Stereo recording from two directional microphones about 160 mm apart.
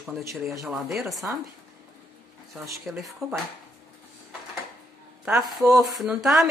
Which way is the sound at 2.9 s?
5° right (ahead or behind).